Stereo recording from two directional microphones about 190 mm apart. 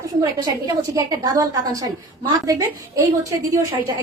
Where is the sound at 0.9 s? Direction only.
20° right (ahead or behind).